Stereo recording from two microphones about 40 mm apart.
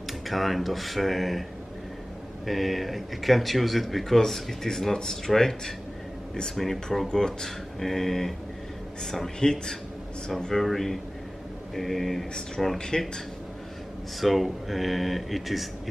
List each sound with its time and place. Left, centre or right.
0.3 s speech: centre
2.4 s speech: centre
7.1 s speech: centre
10.5 s speech: centre
14.2 s speech: centre